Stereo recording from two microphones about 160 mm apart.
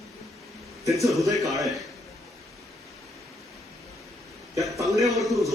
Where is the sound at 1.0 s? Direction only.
Centre (ahead or behind).